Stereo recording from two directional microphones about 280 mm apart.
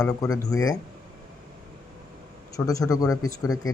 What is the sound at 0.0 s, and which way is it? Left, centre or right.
Speech, centre.